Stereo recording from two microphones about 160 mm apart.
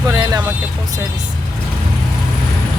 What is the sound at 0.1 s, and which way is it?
Vehicle, 25° right (ahead or behind).